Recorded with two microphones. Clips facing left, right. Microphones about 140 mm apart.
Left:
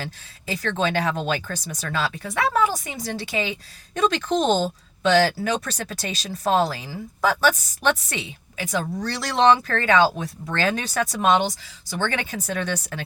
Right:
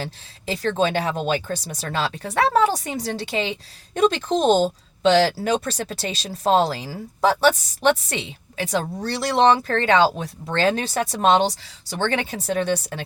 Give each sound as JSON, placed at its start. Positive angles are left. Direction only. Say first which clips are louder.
{"t": 0.0, "sound": "speech", "louder": "right 3 dB", "side_deg": -30}